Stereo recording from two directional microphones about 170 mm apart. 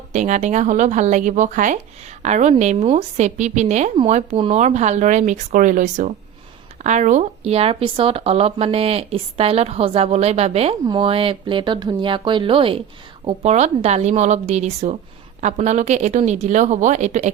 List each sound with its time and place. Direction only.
0.1 s speech: 45° right (ahead or behind)